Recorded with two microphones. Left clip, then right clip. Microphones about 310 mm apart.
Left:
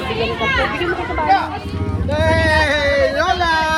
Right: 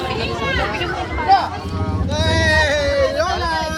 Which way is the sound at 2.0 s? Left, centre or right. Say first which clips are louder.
Left 2 dB; centre.